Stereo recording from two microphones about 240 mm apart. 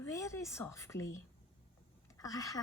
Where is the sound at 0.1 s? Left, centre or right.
Centre.